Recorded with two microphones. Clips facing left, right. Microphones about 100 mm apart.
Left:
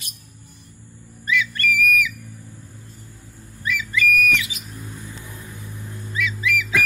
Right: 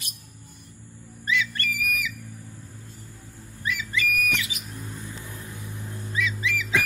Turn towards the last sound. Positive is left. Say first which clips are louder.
# left 3 dB
turn(degrees=-25)  # may be behind; listen again after turning